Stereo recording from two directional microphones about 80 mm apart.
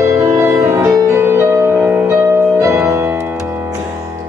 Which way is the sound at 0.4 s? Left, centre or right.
Right.